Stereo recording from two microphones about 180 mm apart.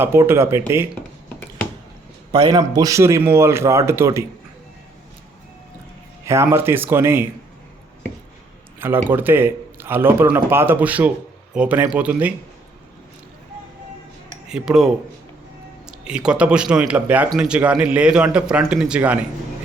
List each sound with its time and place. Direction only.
0.0 s speech: 15° right (ahead or behind)
2.3 s speech: 20° right (ahead or behind)
6.2 s speech: 15° right (ahead or behind)
9.0 s a man's voice: 10° right (ahead or behind)
14.4 s cutlery: 5° right (ahead or behind)
15.9 s speech: 5° right (ahead or behind)